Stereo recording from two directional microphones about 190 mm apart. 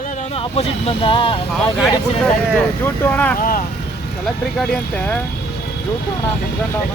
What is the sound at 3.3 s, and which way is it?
Speech, 50° left (ahead or behind).